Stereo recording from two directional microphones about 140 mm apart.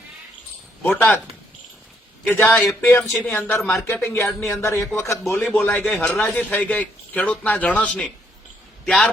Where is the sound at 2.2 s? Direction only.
15° left (ahead or behind).